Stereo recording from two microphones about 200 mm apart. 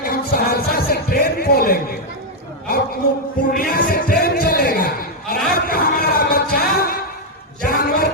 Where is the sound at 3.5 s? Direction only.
50° left (ahead or behind).